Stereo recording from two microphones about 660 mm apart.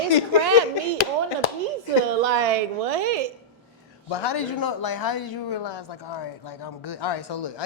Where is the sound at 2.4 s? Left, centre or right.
Right.